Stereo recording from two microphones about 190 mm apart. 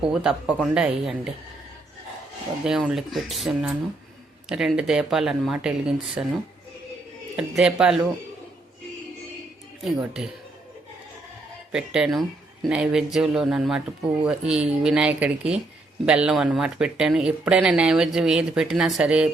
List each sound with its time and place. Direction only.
0.1 s speech: 5° right (ahead or behind)
2.6 s speech: centre (ahead or behind)
7.3 s speech: 5° right (ahead or behind)
9.8 s speech: centre (ahead or behind)
11.7 s speech: 5° right (ahead or behind)